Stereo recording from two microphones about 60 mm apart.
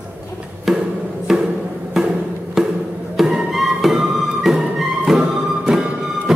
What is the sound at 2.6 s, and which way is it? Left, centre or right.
Music, centre.